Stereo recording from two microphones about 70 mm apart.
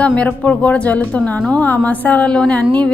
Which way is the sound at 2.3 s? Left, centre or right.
Centre.